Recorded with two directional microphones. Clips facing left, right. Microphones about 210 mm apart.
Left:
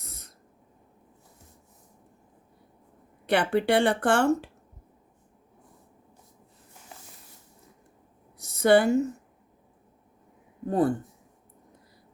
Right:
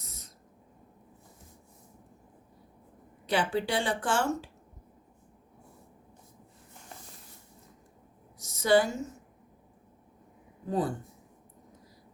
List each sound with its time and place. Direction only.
0.0 s owl: 60° left (ahead or behind)
3.2 s speech: 60° left (ahead or behind)
8.4 s a sound: 60° left (ahead or behind)
10.7 s speech: 55° left (ahead or behind)